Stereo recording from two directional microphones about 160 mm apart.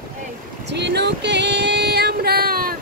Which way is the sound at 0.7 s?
90° right.